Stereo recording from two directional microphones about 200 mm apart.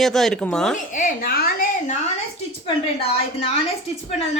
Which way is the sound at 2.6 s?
30° left (ahead or behind).